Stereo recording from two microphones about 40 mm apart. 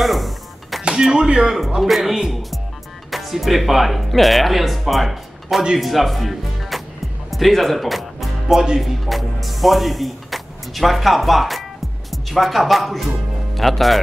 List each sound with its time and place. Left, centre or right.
0.0 s music: centre
1.1 s speech: centre
1.8 s speech: centre
7.2 s music: centre
8.7 s speech: centre